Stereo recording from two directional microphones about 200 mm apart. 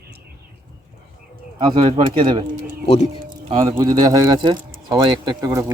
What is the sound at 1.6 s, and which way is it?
Speech, 25° right (ahead or behind).